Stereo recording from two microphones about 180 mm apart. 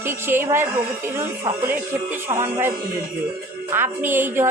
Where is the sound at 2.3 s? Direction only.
15° right (ahead or behind).